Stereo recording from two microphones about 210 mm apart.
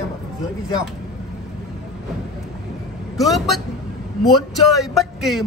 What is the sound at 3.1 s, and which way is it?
A man's voice, centre (ahead or behind).